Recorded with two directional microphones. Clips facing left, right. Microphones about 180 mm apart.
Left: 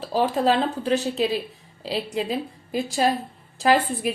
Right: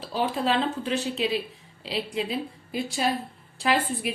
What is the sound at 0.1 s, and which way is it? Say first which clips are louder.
A woman's voice: left 5 dB; 40° left (ahead or behind).